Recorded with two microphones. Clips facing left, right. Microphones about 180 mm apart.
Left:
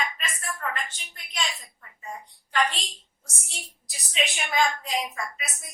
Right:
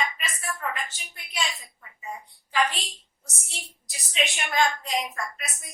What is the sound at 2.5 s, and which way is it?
A woman's voice, 5° right (ahead or behind).